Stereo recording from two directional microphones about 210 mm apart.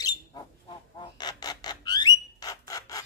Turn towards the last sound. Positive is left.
turn(degrees=15)  # may be behind; listen again after turning